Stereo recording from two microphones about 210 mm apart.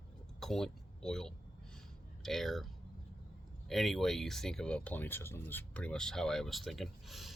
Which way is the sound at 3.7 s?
Centre (ahead or behind).